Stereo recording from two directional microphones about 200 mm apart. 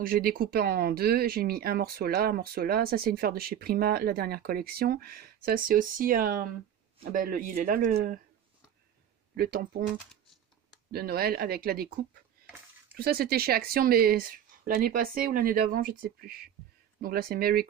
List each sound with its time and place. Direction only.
0.0 s speech: 45° right (ahead or behind)
9.4 s speech: 45° right (ahead or behind)
10.9 s speech: 50° right (ahead or behind)
12.9 s speech: 50° right (ahead or behind)